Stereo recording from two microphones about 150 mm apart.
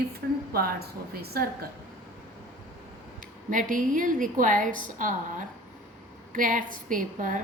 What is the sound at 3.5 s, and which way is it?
A woman's voice, 60° right (ahead or behind).